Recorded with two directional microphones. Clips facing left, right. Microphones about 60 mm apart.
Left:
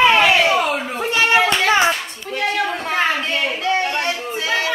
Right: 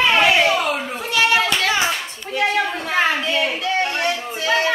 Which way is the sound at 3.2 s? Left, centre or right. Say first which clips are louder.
Even; left.